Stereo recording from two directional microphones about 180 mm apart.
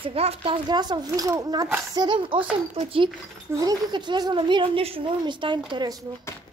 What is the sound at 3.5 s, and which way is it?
Speech, 20° right (ahead or behind).